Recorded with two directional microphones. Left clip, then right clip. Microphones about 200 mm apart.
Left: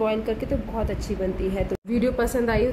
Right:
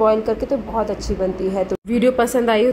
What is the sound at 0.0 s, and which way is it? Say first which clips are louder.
Speech: right 8 dB; 10° right (ahead or behind).